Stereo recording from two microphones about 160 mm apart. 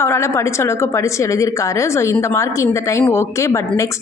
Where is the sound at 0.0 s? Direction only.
15° left (ahead or behind).